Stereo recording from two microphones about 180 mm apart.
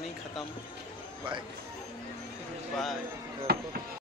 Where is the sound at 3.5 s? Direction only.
60° right (ahead or behind).